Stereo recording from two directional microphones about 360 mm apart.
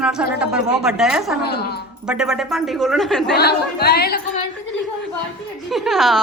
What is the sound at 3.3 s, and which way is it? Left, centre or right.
Speech, left.